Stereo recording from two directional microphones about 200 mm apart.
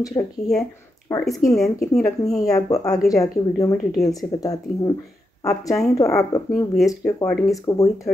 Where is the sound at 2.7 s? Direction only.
15° left (ahead or behind).